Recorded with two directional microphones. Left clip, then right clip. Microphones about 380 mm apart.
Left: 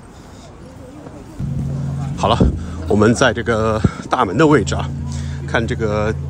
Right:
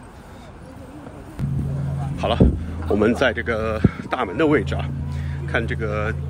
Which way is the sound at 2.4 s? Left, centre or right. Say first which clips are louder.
Left 2 dB; centre.